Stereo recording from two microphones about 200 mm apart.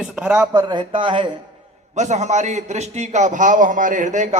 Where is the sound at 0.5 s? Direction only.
20° right (ahead or behind).